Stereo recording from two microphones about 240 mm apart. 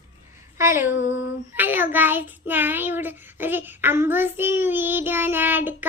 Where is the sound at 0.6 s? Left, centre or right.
Centre.